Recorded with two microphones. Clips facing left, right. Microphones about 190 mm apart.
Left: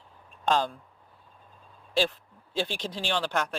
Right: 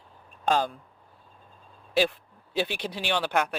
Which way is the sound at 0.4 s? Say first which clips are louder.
Right 1 dB; 10° right (ahead or behind).